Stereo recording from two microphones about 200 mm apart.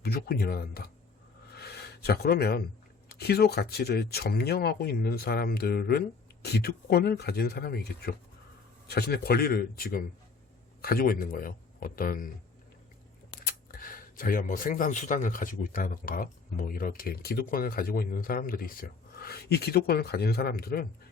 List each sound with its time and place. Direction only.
0.0 s speech: 50° left (ahead or behind)
1.5 s gasp: 55° left (ahead or behind)
3.2 s a man's voice: 50° left (ahead or behind)
13.4 s speech: 45° left (ahead or behind)